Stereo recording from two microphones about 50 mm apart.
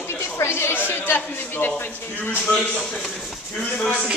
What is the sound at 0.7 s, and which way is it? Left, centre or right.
Speech, left.